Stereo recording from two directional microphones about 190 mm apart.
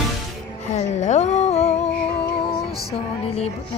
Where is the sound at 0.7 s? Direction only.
40° left (ahead or behind).